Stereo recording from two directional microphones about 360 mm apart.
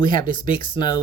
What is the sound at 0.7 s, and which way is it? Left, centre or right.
Speech, centre.